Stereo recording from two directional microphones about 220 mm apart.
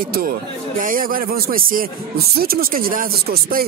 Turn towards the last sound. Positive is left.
turn(degrees=-45)  # may be behind; listen again after turning